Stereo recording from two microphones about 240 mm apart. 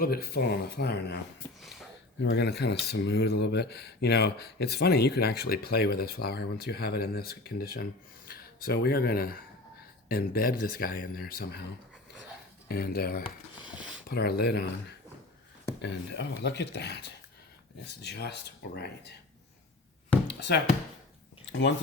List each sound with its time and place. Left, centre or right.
0.0 s speech: left
2.2 s speech: left
12.6 s speech: left
13.2 s a sound: centre
14.1 s speech: left
20.2 s a sound: left